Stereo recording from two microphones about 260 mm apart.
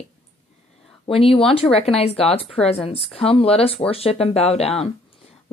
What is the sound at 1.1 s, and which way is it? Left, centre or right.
A woman's voice, left.